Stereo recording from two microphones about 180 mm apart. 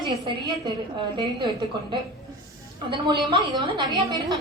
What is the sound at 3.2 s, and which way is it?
A woman's voice, 25° right (ahead or behind).